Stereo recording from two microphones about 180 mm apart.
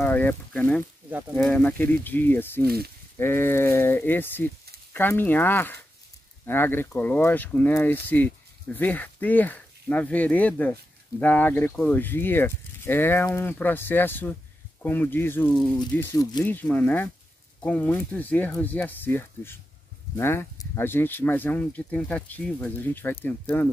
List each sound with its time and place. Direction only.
0.0 s speech: 10° left (ahead or behind)
2.6 s speech: 60° right (ahead or behind)
3.2 s speech: 10° left (ahead or behind)